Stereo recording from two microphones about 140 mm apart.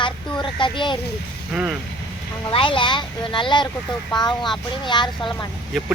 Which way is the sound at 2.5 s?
40° left (ahead or behind).